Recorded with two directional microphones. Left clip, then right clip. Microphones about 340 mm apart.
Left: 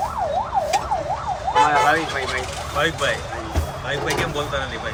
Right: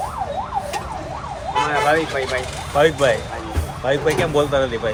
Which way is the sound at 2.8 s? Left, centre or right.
Centre.